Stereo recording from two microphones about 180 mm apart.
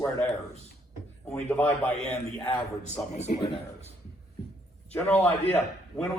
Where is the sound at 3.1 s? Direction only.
40° left (ahead or behind).